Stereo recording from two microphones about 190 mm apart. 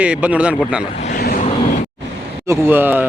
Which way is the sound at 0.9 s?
35° left (ahead or behind).